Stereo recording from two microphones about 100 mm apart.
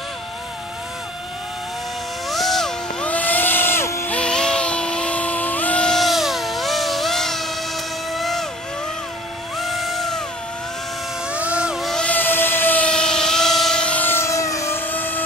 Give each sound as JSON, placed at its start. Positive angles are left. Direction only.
{"t": 2.2, "sound": "music", "side_deg": 0}
{"t": 3.1, "sound": "vehicle", "side_deg": 15}
{"t": 4.1, "sound": "a sound", "side_deg": 10}
{"t": 8.1, "sound": "vehicle", "side_deg": 0}
{"t": 9.6, "sound": "a sound", "side_deg": 0}
{"t": 11.3, "sound": "music", "side_deg": -10}
{"t": 12.0, "sound": "vehicle", "side_deg": 15}